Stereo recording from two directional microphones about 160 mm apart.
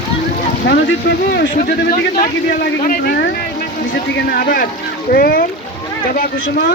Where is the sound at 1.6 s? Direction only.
65° left (ahead or behind).